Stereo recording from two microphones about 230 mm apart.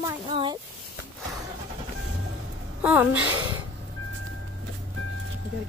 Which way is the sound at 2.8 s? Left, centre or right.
Centre.